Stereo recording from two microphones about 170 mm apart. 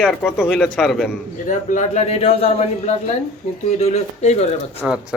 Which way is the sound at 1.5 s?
45° left (ahead or behind).